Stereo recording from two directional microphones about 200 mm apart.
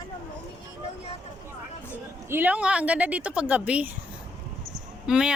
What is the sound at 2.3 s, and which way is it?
A woman's voice, 10° right (ahead or behind).